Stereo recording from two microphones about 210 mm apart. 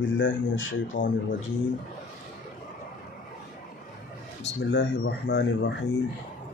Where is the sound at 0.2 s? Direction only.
65° left (ahead or behind).